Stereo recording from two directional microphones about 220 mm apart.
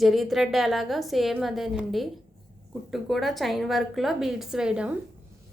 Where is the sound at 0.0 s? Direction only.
Centre (ahead or behind).